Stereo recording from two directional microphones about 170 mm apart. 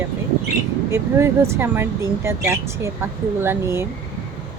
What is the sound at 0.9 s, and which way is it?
Speech, 15° right (ahead or behind).